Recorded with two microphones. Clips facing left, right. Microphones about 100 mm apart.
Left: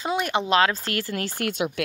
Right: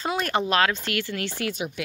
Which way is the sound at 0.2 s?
20° left (ahead or behind).